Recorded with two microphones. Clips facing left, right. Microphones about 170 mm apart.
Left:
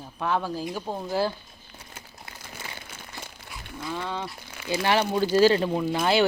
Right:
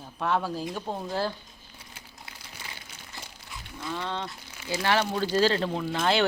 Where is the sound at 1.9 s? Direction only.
50° left (ahead or behind).